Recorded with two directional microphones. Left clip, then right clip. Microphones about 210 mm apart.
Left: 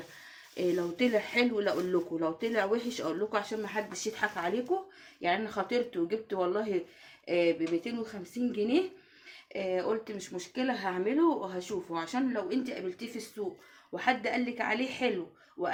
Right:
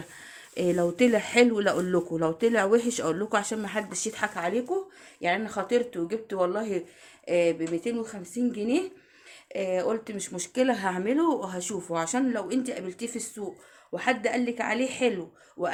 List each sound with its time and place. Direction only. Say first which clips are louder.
0.5 s speech: right 5 dB; 50° right (ahead or behind); by 15.7 s 25° right (ahead or behind)